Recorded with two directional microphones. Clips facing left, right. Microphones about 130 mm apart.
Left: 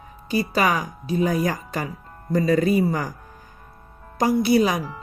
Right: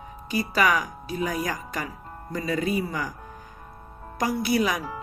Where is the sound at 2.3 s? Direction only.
40° left (ahead or behind).